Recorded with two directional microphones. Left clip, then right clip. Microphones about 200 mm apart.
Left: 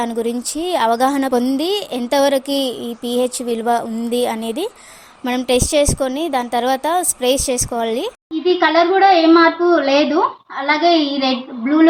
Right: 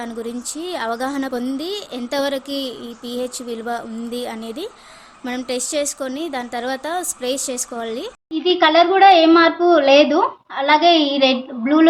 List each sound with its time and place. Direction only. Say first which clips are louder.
0.0 s a woman's voice: left 7 dB; 30° left (ahead or behind)
8.4 s a woman's voice: even; 5° right (ahead or behind)